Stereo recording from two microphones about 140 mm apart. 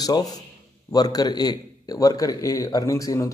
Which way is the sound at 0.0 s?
25° left (ahead or behind).